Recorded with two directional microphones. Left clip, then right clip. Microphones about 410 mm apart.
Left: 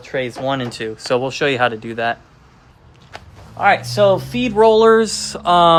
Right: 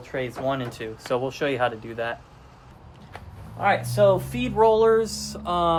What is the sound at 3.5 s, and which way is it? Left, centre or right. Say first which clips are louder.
Speech: left 7 dB; centre.